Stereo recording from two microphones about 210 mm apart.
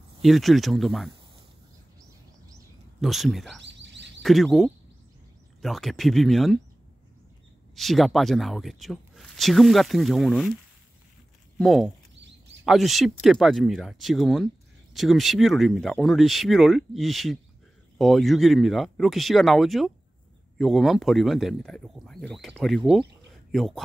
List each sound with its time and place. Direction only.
0.2 s speech: centre (ahead or behind)
3.0 s speech: centre (ahead or behind)
3.6 s a sound: 60° right (ahead or behind)
4.2 s speech: centre (ahead or behind)
7.7 s speech: centre (ahead or behind)
11.5 s speech: centre (ahead or behind)